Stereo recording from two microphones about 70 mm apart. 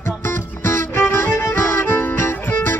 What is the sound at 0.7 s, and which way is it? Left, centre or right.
Music, left.